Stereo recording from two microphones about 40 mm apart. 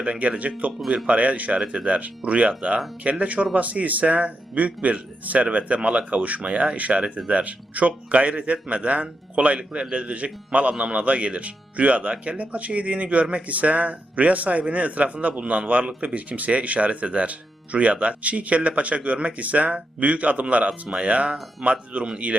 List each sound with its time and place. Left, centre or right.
0.0 s a man's voice: right
20.7 s speech: right
21.6 s a man's voice: right